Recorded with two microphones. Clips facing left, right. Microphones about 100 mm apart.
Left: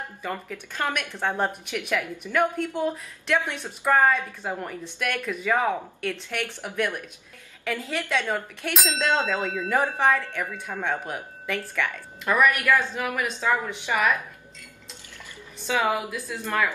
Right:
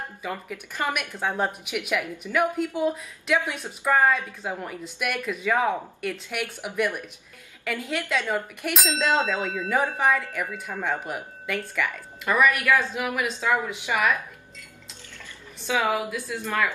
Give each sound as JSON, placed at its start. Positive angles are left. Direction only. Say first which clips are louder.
{"t": 0.2, "sound": "a woman's voice", "louder": "left 1 dB", "side_deg": -5}
{"t": 7.6, "sound": "a woman's voice", "louder": "even", "side_deg": 0}
{"t": 15.9, "sound": "speech", "louder": "right 1 dB", "side_deg": 0}